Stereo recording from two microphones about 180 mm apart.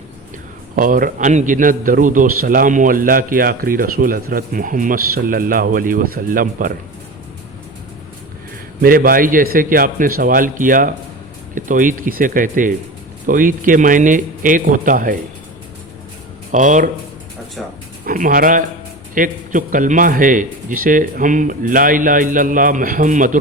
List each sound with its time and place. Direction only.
0.8 s a man's voice: 50° right (ahead or behind)
8.8 s a man's voice: 50° right (ahead or behind)
16.5 s a man's voice: 45° right (ahead or behind)
17.6 s speech: centre (ahead or behind)
18.0 s a man's voice: 50° right (ahead or behind)